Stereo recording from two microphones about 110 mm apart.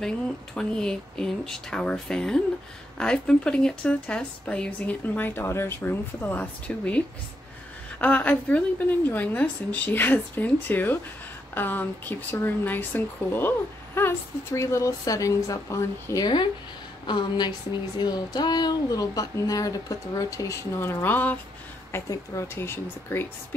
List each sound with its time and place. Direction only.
0.6 s speech: 5° left (ahead or behind)
8.0 s speech: 15° left (ahead or behind); by 16.3 s 30° left (ahead or behind)
17.0 s a woman's voice: 45° left (ahead or behind); by 21.4 s 15° left (ahead or behind)
21.9 s speech: 25° left (ahead or behind)